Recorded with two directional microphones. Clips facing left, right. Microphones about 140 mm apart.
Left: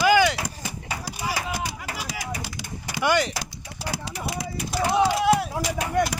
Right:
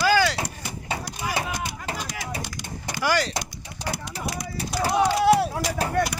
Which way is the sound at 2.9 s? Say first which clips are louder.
Left 2 dB; 20° left (ahead or behind).